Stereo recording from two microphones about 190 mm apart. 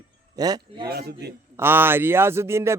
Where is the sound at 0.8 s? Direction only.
55° right (ahead or behind).